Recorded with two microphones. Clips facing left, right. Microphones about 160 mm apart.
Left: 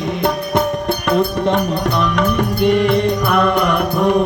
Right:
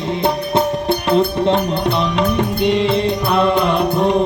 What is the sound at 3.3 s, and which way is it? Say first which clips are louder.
Music: right 2 dB; 25° right (ahead or behind).